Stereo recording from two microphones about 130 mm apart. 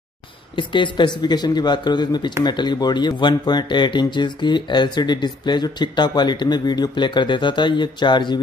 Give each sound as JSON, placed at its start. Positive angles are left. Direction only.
{"t": 0.6, "sound": "speech", "side_deg": 40}